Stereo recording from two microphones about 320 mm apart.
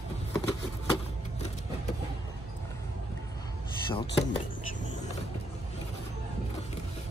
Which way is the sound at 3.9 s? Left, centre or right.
Centre.